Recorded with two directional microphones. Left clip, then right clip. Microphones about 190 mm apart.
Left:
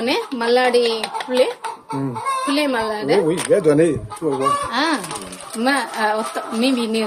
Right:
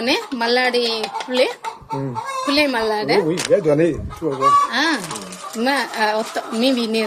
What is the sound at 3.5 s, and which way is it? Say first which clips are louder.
Speech: left 1 dB; 30° left (ahead or behind).